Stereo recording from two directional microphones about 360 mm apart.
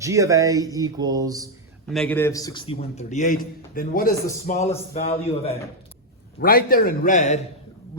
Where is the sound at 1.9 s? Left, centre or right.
Centre.